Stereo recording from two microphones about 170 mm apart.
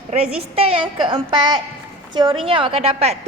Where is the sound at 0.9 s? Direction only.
30° right (ahead or behind).